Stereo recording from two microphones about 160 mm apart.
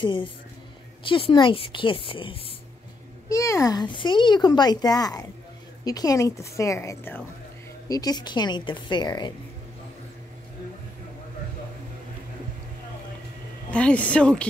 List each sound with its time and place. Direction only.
0.0 s a woman's voice: 30° left (ahead or behind)
3.3 s speech: 20° left (ahead or behind)
7.9 s speech: 25° left (ahead or behind)
13.7 s a woman's voice: 10° left (ahead or behind)